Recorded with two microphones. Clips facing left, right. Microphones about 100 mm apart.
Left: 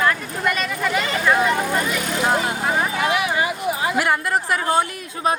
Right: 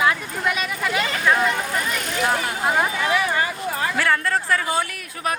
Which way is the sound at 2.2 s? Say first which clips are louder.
Left 1 dB; 25° left (ahead or behind).